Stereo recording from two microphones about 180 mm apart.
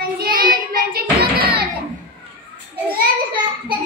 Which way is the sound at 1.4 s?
30° right (ahead or behind).